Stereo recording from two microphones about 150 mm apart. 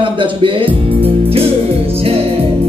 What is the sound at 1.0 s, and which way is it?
Music, 40° right (ahead or behind).